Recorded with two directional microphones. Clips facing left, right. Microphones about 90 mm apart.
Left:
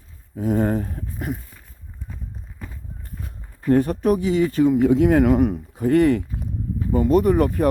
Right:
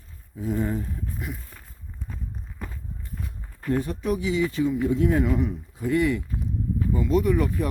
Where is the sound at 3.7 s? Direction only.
50° left (ahead or behind).